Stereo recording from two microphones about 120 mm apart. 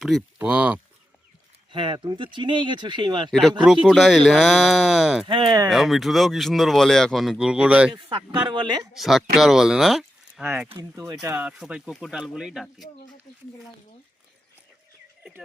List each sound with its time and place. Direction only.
0.3 s speech: 15° right (ahead or behind)
1.7 s speech: 40° right (ahead or behind)
3.8 s speech: centre (ahead or behind)
5.2 s speech: 40° right (ahead or behind)
5.6 s speech: centre (ahead or behind)
7.9 s speech: 40° right (ahead or behind)
8.9 s speech: centre (ahead or behind)
10.8 s speech: 25° right (ahead or behind)
11.3 s speech: 10° right (ahead or behind)